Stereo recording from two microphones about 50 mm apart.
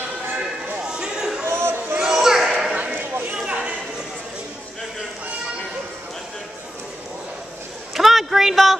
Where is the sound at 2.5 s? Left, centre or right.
Centre.